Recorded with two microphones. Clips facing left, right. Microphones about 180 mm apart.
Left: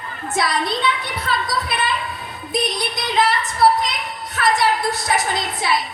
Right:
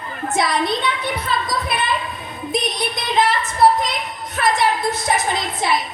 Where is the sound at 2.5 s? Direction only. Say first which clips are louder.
Even; 20° right (ahead or behind).